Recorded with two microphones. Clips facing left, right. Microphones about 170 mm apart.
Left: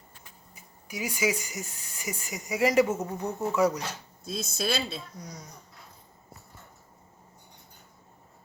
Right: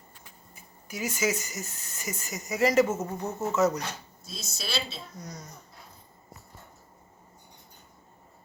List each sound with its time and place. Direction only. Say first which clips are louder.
0.5 s speech: left 1 dB; 15° left (ahead or behind)
3.0 s speech: left 1 dB; centre (ahead or behind)
3.5 s speech: even; 10° left (ahead or behind)
4.2 s a woman's voice: left 13 dB; 55° left (ahead or behind)
5.1 s speech: right 1 dB; 10° left (ahead or behind)